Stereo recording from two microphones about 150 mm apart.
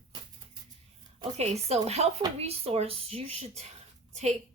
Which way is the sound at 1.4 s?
45° right (ahead or behind).